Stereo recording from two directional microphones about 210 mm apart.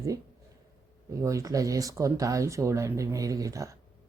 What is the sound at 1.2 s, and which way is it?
Speech, 15° right (ahead or behind).